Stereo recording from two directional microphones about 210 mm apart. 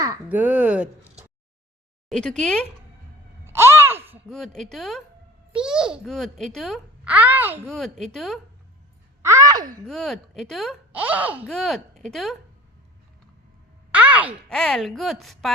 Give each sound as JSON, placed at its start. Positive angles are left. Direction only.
{"t": 0.0, "sound": "speech", "side_deg": -10}
{"t": 2.0, "sound": "a child's voice", "side_deg": 5}
{"t": 3.4, "sound": "a sound", "side_deg": -10}
{"t": 4.3, "sound": "a child's voice", "side_deg": 0}
{"t": 7.7, "sound": "a child's voice", "side_deg": 5}
{"t": 9.2, "sound": "speech", "side_deg": -15}
{"t": 9.8, "sound": "a child's voice", "side_deg": 0}
{"t": 13.9, "sound": "groan", "side_deg": -5}
{"t": 14.5, "sound": "a child's voice", "side_deg": 0}